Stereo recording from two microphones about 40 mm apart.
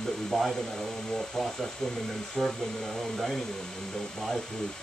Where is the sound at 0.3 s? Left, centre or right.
Centre.